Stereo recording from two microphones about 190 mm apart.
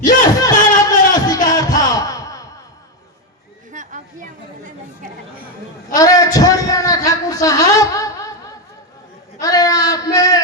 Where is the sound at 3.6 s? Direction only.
40° right (ahead or behind).